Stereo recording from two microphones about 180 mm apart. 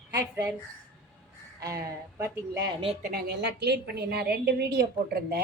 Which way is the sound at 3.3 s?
65° right (ahead or behind).